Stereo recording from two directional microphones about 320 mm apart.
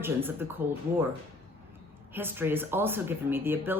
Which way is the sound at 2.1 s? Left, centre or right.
Centre.